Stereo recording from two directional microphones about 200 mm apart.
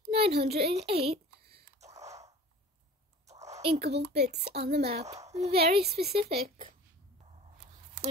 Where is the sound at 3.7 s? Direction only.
55° right (ahead or behind).